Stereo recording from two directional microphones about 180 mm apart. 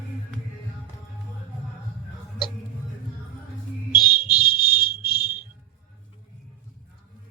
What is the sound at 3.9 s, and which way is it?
Music, 25° left (ahead or behind).